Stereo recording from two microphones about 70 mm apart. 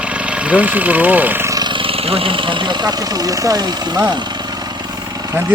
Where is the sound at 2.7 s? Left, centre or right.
Right.